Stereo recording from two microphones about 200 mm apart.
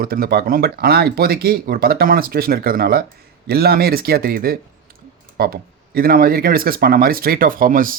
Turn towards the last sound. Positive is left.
turn(degrees=-45)  # may be behind; listen again after turning